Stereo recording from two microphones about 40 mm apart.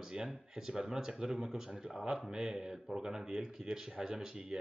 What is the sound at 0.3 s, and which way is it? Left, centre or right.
Speech, centre.